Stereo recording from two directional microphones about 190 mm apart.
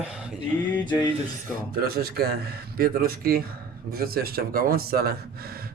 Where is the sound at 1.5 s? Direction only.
55° right (ahead or behind).